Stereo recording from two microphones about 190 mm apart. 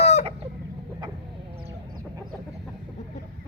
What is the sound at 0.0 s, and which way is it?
Chicken, 35° left (ahead or behind).